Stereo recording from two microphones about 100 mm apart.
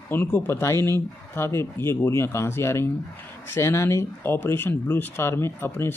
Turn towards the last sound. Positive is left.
turn(degrees=25)  # may be behind; listen again after turning